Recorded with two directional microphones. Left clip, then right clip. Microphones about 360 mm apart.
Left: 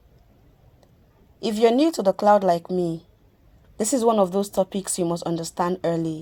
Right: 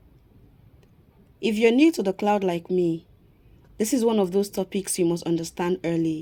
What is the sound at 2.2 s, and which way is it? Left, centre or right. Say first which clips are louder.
Speech: left 7 dB; left.